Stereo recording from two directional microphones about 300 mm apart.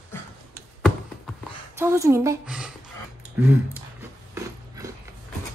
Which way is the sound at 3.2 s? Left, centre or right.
Centre.